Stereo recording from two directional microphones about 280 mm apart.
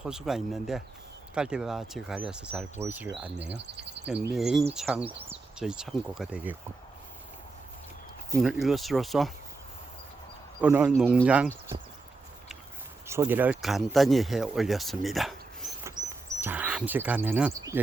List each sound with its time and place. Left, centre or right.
0.0 s speech: centre
3.5 s speech: right
4.0 s speech: centre
8.4 s speech: centre
10.6 s speech: centre
13.1 s speech: centre